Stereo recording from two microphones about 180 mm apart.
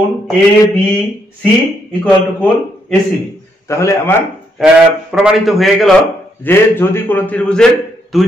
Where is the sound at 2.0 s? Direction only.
5° left (ahead or behind).